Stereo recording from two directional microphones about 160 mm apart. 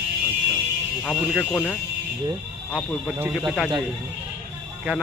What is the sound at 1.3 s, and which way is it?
Speech, centre (ahead or behind).